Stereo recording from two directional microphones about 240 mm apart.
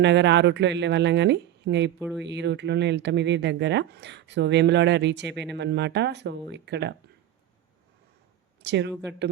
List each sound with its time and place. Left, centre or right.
0.0 s speech: right
2.0 s speech: centre
2.2 s speech: right
8.6 s speech: right